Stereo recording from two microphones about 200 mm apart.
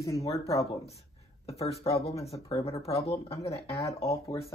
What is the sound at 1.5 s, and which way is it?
Speech, 30° left (ahead or behind).